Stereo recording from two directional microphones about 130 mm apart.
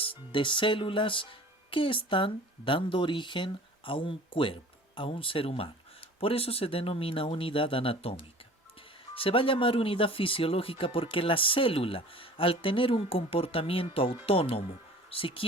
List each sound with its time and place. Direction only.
0.0 s speech: 40° left (ahead or behind)